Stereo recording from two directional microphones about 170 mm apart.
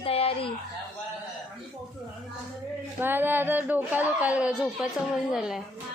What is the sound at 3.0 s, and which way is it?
A woman's voice, 10° right (ahead or behind).